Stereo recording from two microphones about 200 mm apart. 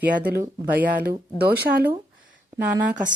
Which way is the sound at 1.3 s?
50° right (ahead or behind).